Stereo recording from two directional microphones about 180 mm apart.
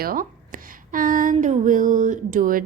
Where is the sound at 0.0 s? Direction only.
50° right (ahead or behind).